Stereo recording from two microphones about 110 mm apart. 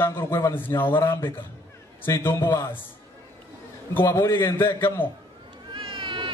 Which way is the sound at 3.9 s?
25° left (ahead or behind).